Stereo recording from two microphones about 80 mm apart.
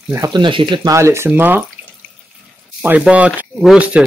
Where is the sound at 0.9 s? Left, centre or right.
Right.